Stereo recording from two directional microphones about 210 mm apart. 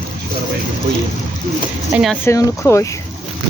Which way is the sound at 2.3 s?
15° left (ahead or behind).